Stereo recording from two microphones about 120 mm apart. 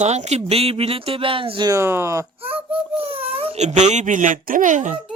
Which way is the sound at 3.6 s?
75° right (ahead or behind).